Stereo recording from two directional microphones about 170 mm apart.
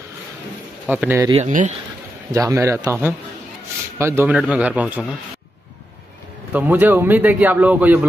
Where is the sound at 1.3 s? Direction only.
45° right (ahead or behind).